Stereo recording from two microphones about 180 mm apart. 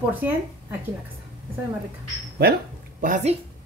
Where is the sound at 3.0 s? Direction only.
45° right (ahead or behind).